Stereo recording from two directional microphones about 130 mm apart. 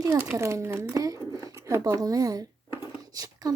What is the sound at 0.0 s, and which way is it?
Speech, 25° right (ahead or behind).